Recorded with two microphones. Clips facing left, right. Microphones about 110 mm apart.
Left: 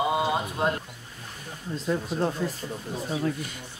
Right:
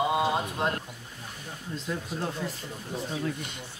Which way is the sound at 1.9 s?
40° left (ahead or behind).